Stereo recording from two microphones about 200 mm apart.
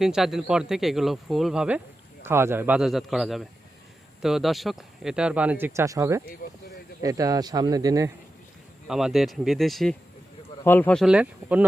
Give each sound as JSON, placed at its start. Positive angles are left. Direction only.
{"t": 0.0, "sound": "speech", "side_deg": 0}
{"t": 8.9, "sound": "speech", "side_deg": 0}